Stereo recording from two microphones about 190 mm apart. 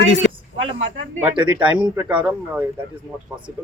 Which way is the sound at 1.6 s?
5° right (ahead or behind).